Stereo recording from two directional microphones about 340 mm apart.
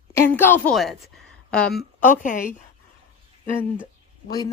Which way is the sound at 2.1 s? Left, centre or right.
Left.